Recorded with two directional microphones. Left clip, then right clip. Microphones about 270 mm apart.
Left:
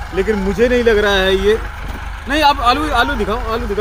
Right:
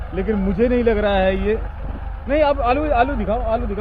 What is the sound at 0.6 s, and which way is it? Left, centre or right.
Speech, right.